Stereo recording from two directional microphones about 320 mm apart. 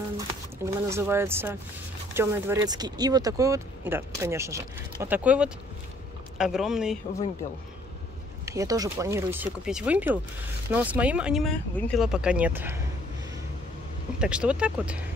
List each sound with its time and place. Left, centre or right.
0.7 s speech: centre
8.5 s speech: centre
14.2 s speech: centre